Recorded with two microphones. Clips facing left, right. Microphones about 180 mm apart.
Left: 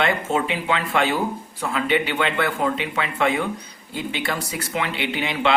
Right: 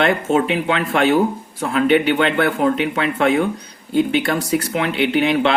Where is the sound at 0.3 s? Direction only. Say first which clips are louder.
Right 5 dB; 60° right (ahead or behind).